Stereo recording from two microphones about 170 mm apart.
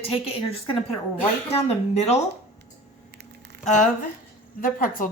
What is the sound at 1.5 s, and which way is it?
Speech, 35° left (ahead or behind).